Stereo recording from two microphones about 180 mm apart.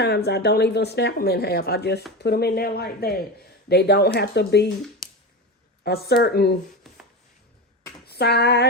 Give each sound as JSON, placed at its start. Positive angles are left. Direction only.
{"t": 0.0, "sound": "speech", "side_deg": 65}
{"t": 5.8, "sound": "speech", "side_deg": 65}
{"t": 8.0, "sound": "a sound", "side_deg": 65}